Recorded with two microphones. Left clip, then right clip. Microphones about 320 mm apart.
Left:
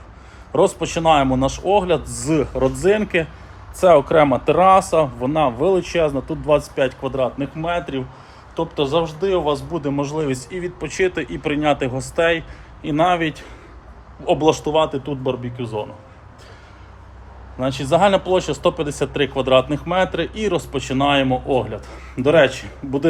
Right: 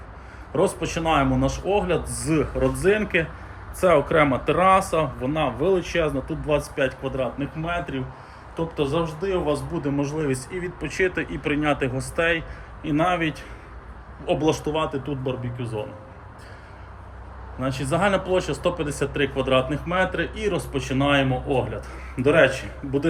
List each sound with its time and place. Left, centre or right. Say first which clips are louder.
0.5 s a man's voice: left 6 dB; centre
14.4 s speech: left 8 dB; centre
17.6 s speech: left 7 dB; centre